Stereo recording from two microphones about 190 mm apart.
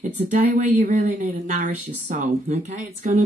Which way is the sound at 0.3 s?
40° right (ahead or behind).